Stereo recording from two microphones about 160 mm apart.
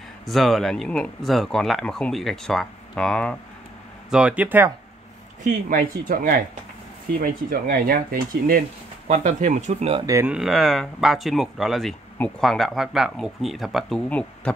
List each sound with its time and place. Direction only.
0.3 s speech: centre (ahead or behind)
4.1 s speech: 5° right (ahead or behind)
5.4 s speech: 60° right (ahead or behind)
10.0 s speech: 20° right (ahead or behind)
10.3 s speech: centre (ahead or behind)